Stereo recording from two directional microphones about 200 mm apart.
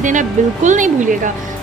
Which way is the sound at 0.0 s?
40° right (ahead or behind).